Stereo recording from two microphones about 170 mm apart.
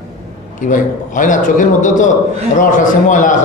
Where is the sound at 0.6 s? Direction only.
50° left (ahead or behind).